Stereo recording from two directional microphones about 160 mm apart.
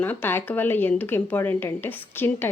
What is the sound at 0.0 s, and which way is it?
Speech, 10° left (ahead or behind).